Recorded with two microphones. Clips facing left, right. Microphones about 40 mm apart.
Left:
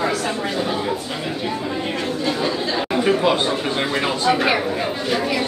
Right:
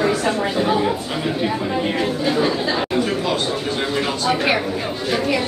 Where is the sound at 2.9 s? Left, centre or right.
Centre.